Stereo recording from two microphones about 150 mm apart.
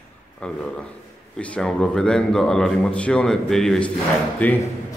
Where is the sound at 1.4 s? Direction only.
5° left (ahead or behind).